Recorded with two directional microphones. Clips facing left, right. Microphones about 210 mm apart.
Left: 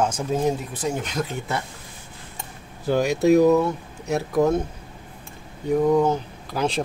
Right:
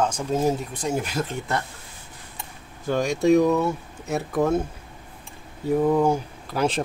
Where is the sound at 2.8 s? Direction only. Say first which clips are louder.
Left 2 dB; 5° left (ahead or behind).